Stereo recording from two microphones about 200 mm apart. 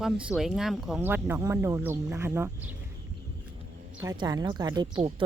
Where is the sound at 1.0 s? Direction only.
10° right (ahead or behind).